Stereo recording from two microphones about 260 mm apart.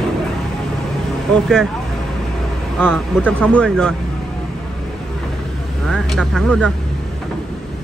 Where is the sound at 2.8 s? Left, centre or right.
Centre.